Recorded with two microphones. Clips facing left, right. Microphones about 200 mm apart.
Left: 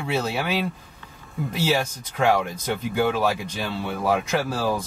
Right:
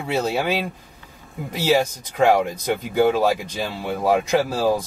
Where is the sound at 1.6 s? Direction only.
15° right (ahead or behind).